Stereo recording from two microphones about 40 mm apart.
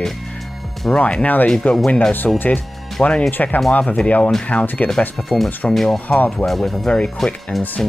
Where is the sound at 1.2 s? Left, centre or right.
Left.